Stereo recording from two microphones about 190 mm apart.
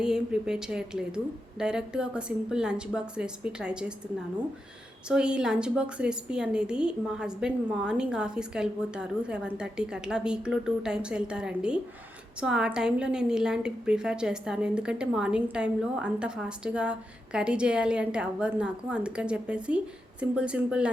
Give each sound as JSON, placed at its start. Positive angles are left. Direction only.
{"t": 0.0, "sound": "a woman's voice", "side_deg": -5}
{"t": 5.0, "sound": "a woman's voice", "side_deg": -5}